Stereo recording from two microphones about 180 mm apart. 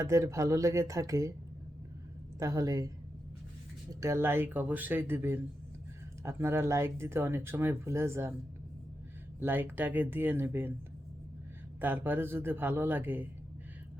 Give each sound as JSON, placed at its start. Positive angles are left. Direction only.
{"t": 0.0, "sound": "speech", "side_deg": -15}
{"t": 2.4, "sound": "speech", "side_deg": -20}
{"t": 4.0, "sound": "speech", "side_deg": -15}
{"t": 9.4, "sound": "speech", "side_deg": -10}
{"t": 11.8, "sound": "speech", "side_deg": -10}